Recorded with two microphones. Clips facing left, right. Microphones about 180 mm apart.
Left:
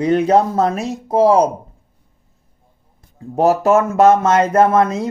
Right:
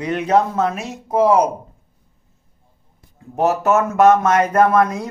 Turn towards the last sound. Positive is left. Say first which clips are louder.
# left 2 dB
turn(degrees=25)  # may be behind; listen again after turning